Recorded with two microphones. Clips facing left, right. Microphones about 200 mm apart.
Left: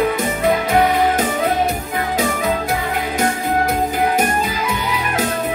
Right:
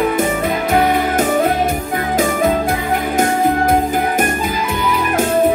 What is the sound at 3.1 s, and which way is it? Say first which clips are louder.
Music: right 4 dB; 50° right (ahead or behind).